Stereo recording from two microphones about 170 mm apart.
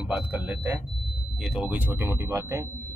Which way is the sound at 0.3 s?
10° right (ahead or behind).